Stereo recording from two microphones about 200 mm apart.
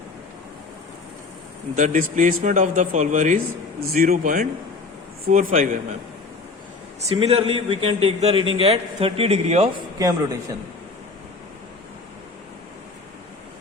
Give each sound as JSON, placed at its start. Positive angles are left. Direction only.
{"t": 1.7, "sound": "a man's voice", "side_deg": -40}
{"t": 7.2, "sound": "a man's voice", "side_deg": -30}
{"t": 10.0, "sound": "speech", "side_deg": -15}